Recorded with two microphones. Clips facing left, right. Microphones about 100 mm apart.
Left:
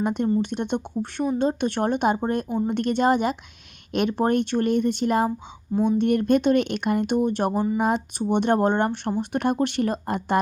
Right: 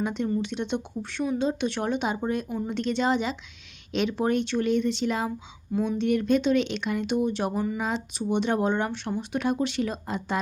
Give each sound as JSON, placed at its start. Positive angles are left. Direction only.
{"t": 0.0, "sound": "speech", "side_deg": 50}
{"t": 7.5, "sound": "speech", "side_deg": 25}
{"t": 7.8, "sound": "speech", "side_deg": 55}